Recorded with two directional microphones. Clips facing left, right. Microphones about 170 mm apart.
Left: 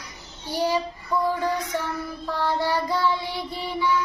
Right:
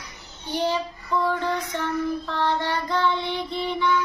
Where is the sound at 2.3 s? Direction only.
10° left (ahead or behind).